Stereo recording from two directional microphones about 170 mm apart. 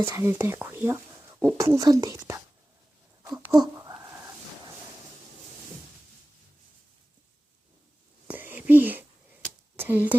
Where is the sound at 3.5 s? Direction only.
20° right (ahead or behind).